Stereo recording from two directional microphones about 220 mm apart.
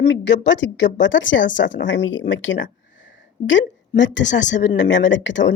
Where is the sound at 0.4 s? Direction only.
55° left (ahead or behind).